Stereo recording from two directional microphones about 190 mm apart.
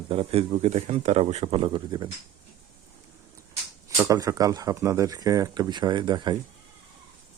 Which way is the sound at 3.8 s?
15° right (ahead or behind).